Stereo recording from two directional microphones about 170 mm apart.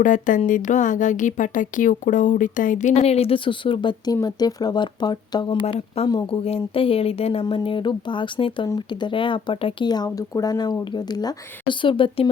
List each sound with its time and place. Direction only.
0.0 s a woman's voice: 50° left (ahead or behind); by 5.5 s 25° left (ahead or behind)
5.6 s speech: 35° left (ahead or behind)